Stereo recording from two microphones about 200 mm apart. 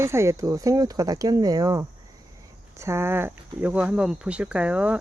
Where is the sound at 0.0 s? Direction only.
15° right (ahead or behind).